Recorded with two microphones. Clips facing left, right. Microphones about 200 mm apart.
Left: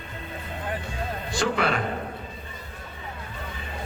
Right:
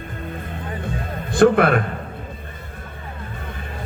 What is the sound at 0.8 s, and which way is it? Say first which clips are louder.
Music: right 4 dB; 55° right (ahead or behind).